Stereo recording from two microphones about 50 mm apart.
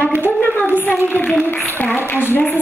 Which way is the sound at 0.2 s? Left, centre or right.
Left.